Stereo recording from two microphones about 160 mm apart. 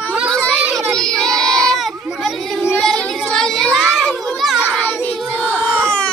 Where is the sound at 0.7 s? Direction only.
5° left (ahead or behind).